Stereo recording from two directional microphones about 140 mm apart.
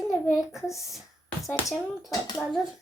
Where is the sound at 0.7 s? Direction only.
Centre (ahead or behind).